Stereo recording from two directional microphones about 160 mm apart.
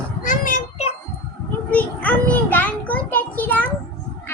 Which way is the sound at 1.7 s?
10° left (ahead or behind).